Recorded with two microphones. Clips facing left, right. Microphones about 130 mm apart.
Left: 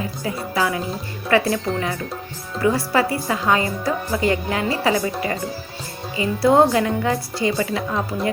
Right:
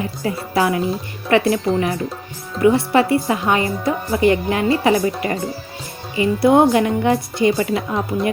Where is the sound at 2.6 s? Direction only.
25° right (ahead or behind).